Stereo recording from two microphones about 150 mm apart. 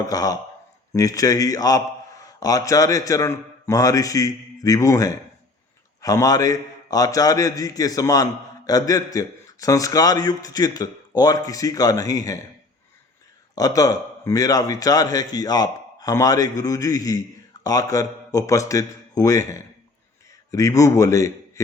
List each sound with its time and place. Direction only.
0.0 s a man's voice: 25° left (ahead or behind)
13.6 s a man's voice: 25° left (ahead or behind)